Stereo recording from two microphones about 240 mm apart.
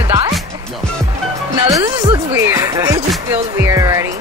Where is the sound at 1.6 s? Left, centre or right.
Centre.